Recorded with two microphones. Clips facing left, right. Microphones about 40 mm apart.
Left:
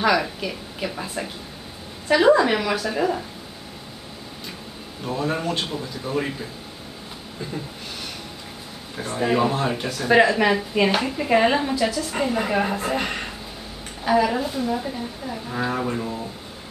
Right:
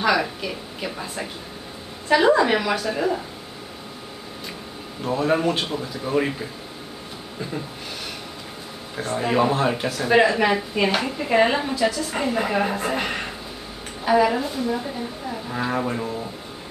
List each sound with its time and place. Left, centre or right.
0.0 s a woman's voice: centre
5.0 s speech: centre
8.9 s a woman's voice: centre